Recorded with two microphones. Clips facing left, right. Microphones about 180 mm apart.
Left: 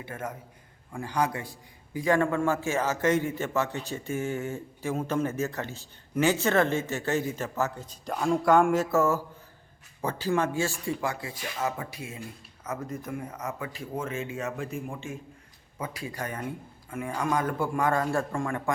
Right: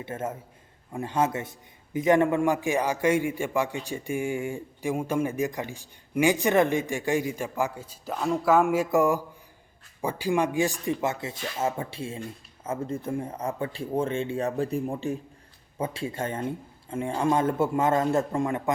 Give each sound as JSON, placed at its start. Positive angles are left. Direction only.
{"t": 0.0, "sound": "a man's voice", "side_deg": -25}